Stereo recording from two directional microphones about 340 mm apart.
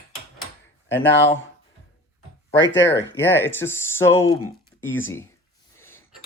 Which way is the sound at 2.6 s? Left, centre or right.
Left.